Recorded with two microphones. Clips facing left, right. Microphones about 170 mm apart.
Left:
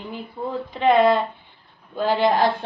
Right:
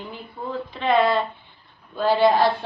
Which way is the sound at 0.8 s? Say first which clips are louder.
Left 3 dB; 15° left (ahead or behind).